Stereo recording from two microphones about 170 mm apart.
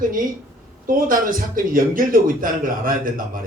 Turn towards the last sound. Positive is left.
turn(degrees=-55)  # may be behind; listen again after turning